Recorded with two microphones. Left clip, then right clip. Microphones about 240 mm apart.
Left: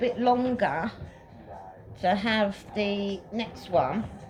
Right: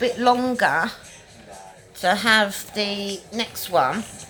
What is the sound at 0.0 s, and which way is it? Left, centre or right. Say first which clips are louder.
Speech: right 5 dB; right.